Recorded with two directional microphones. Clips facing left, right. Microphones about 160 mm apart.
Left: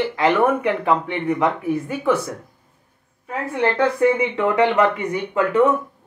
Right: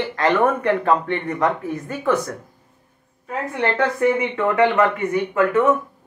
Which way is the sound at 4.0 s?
15° left (ahead or behind).